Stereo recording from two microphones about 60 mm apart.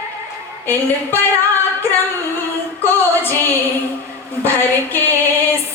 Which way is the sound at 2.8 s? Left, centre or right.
Left.